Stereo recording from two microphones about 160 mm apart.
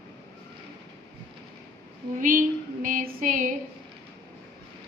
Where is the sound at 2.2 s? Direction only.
60° right (ahead or behind).